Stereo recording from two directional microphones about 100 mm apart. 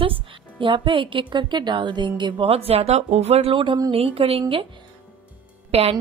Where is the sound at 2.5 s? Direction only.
80° right.